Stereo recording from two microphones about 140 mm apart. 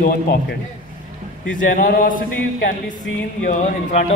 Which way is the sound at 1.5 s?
75° left (ahead or behind).